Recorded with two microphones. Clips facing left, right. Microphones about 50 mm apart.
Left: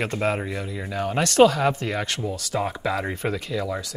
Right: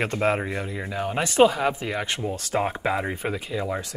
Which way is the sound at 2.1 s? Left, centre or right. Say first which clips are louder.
Right 1 dB; right.